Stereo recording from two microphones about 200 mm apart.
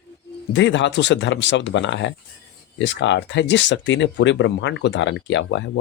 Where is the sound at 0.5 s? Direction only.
65° left (ahead or behind).